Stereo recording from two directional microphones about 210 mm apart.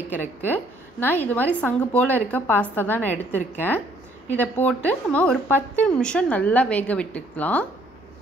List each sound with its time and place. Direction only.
0.5 s a woman's voice: 10° left (ahead or behind)